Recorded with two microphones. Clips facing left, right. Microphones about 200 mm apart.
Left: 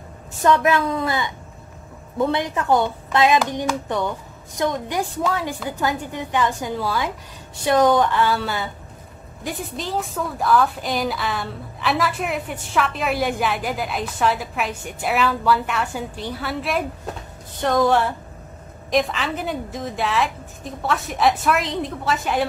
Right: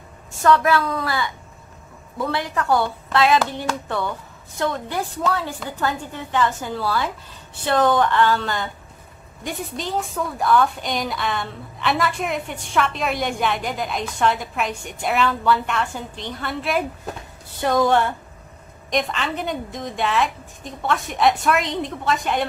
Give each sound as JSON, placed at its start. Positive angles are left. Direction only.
{"t": 0.4, "sound": "a woman's voice", "side_deg": 20}